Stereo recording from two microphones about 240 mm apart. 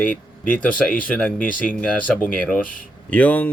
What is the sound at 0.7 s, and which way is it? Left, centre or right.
Speech, left.